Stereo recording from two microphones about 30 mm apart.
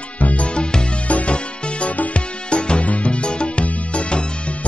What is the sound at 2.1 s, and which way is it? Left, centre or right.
Music, left.